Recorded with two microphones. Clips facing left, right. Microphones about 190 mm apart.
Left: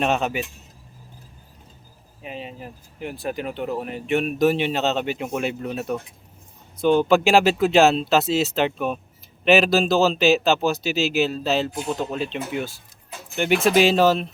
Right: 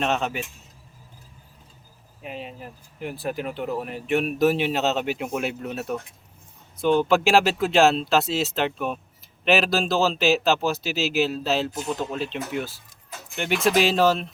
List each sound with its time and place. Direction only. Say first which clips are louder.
0.0 s speech: left 3 dB; 10° left (ahead or behind)
2.2 s speech: left 1 dB; centre (ahead or behind)